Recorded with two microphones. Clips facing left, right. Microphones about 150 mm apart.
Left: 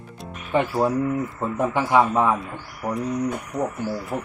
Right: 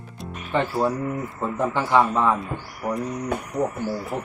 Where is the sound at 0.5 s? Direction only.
15° left (ahead or behind).